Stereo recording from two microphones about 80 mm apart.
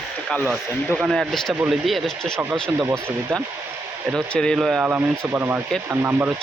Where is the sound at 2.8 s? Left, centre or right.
Right.